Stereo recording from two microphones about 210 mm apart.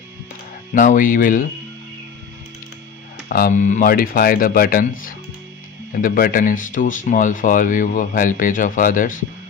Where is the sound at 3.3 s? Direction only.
45° left (ahead or behind).